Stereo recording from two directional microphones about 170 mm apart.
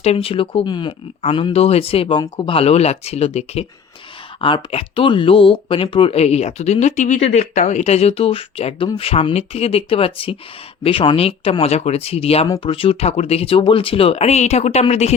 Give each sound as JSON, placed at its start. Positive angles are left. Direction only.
{"t": 0.0, "sound": "speech", "side_deg": 35}